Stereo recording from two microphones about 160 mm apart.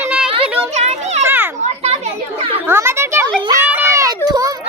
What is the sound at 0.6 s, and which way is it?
Children playing, 45° right (ahead or behind).